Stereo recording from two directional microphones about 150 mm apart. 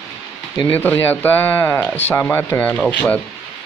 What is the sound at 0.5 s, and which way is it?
Speech, 10° left (ahead or behind).